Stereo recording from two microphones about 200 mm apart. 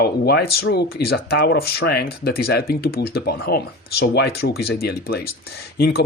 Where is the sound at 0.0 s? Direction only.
55° left (ahead or behind).